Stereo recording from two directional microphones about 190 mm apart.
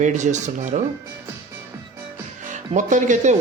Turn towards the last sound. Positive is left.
turn(degrees=-40)  # may be behind; listen again after turning